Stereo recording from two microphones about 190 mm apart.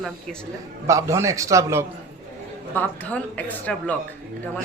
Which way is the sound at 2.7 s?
10° left (ahead or behind).